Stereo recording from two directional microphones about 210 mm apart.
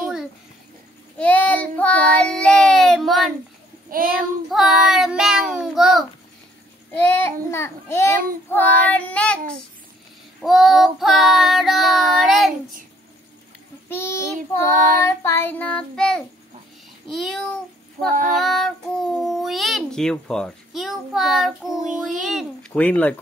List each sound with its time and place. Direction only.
1.1 s child singing: 5° left (ahead or behind)
3.9 s a child's voice: 45° right (ahead or behind)
4.5 s child singing: centre (ahead or behind)
6.9 s child singing: 10° left (ahead or behind)
8.2 s child singing: 40° right (ahead or behind)
8.9 s a child's voice: 5° left (ahead or behind)
10.4 s a child's voice: centre (ahead or behind)
13.8 s child singing: 10° left (ahead or behind)
17.1 s a child's voice: centre (ahead or behind)
22.7 s child singing: 10° left (ahead or behind)